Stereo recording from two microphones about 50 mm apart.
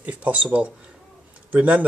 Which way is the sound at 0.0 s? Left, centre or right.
Right.